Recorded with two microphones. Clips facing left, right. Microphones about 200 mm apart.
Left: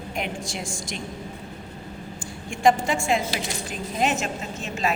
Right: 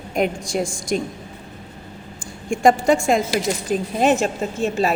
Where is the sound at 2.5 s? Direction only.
45° right (ahead or behind).